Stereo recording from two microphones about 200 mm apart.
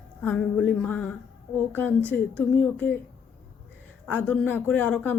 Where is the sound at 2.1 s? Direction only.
10° left (ahead or behind).